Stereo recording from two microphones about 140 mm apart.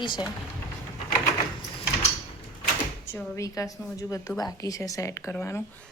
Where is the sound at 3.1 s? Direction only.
20° left (ahead or behind).